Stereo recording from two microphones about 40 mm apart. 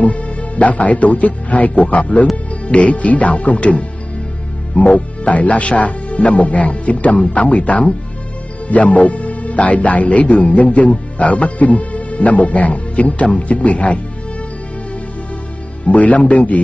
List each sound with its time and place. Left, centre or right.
0.0 s speech: left
15.9 s speech: left